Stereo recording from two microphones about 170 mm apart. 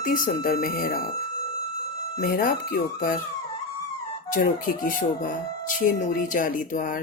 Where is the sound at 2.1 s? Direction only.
55° left (ahead or behind).